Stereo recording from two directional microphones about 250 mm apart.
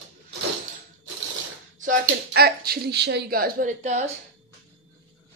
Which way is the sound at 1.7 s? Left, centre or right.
Right.